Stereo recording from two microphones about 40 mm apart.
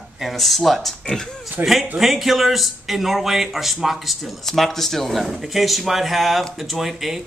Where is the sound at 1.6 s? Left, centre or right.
Right.